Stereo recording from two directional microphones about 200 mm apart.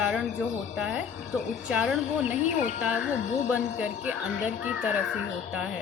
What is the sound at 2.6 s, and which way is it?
Speech, 40° left (ahead or behind).